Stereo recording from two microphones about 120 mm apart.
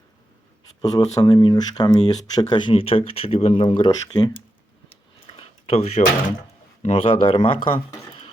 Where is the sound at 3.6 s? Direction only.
45° left (ahead or behind).